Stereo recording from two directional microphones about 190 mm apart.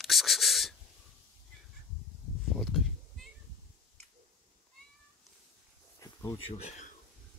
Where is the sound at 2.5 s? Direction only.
Centre (ahead or behind).